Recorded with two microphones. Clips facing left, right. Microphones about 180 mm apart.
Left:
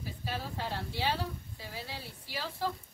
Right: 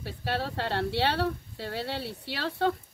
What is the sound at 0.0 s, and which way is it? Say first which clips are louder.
Speech: right 7 dB; 70° right (ahead or behind).